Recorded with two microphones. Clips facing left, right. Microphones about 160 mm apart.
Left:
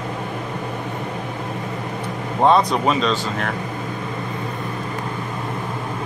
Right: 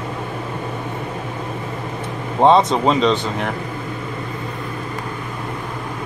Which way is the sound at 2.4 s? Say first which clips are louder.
Right 3 dB; 20° right (ahead or behind).